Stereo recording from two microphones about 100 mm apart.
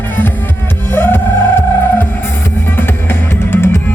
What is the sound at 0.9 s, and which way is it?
Music, 20° left (ahead or behind).